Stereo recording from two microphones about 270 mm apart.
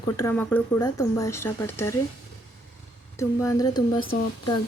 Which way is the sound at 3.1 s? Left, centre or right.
Centre.